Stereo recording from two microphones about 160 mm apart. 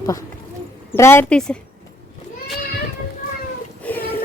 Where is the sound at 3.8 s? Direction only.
10° left (ahead or behind).